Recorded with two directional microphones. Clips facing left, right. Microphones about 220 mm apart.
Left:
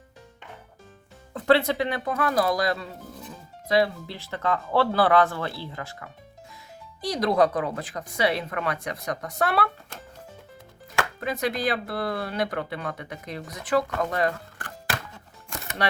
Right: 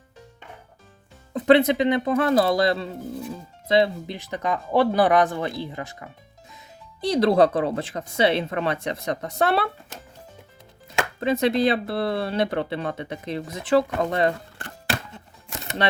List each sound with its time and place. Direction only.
1.3 s speech: 20° right (ahead or behind)
10.9 s speech: 25° right (ahead or behind)